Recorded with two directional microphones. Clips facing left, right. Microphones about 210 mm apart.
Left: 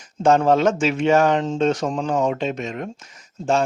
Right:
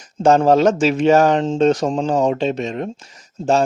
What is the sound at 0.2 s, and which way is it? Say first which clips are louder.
Speech: right 3 dB; 40° right (ahead or behind).